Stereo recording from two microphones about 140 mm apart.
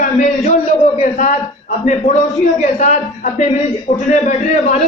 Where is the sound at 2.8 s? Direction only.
55° left (ahead or behind).